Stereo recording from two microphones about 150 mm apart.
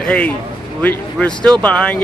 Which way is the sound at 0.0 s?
10° left (ahead or behind).